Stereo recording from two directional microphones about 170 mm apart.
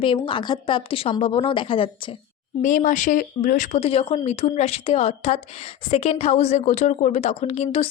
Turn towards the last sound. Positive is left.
turn(degrees=35)  # may be behind; listen again after turning